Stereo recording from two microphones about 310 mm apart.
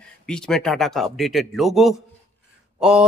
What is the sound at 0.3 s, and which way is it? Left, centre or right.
Speech, centre.